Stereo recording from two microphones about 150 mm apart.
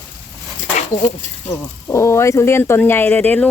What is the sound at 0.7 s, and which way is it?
Speech, 55° left (ahead or behind).